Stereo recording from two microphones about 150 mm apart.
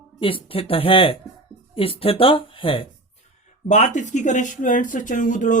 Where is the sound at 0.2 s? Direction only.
35° left (ahead or behind).